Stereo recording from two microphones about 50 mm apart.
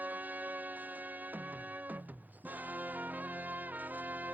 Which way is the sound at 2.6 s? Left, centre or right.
Right.